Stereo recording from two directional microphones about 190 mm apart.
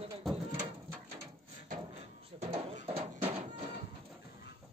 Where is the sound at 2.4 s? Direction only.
30° right (ahead or behind).